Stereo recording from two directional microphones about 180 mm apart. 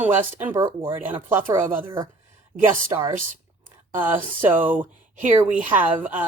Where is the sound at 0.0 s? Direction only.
10° right (ahead or behind).